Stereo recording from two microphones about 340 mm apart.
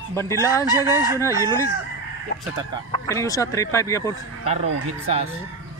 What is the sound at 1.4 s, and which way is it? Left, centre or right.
Speech, centre.